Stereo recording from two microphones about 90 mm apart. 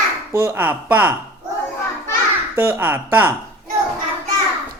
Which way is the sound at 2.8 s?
20° right (ahead or behind).